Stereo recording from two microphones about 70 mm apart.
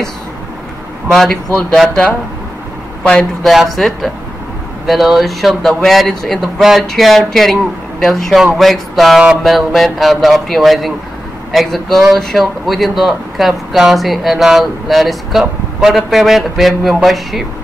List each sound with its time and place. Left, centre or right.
1.1 s speech: centre
3.0 s speech: centre
3.4 s speech: centre